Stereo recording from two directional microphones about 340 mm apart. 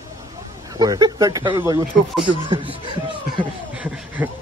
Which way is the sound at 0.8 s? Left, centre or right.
Centre.